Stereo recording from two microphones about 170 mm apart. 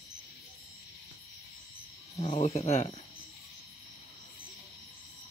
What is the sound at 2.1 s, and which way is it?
Speech, 30° left (ahead or behind).